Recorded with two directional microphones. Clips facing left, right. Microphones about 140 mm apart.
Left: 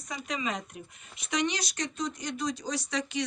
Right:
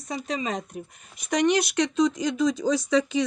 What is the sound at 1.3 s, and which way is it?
Speech, 50° right (ahead or behind).